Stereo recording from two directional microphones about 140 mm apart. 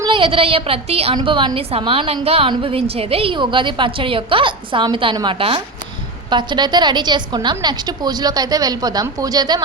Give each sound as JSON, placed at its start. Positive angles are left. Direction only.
{"t": 0.0, "sound": "a woman's voice", "side_deg": -35}